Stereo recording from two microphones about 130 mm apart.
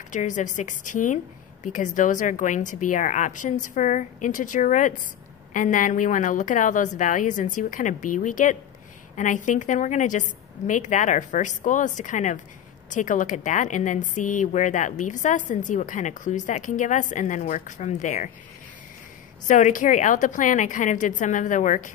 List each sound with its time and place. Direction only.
0.1 s a woman's voice: 70° left (ahead or behind)
5.5 s a woman's voice: 90° left
19.4 s a woman's voice: 75° left (ahead or behind)